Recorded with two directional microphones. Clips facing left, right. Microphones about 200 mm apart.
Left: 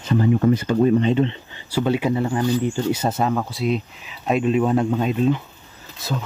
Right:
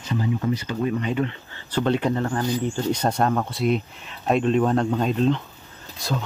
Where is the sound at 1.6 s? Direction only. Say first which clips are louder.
Left 2 dB; 10° left (ahead or behind).